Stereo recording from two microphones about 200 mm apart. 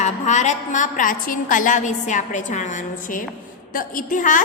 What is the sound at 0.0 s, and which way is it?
A woman's voice, 35° left (ahead or behind).